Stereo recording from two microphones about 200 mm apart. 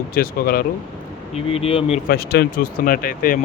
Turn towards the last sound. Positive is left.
turn(degrees=45)  # may be behind; listen again after turning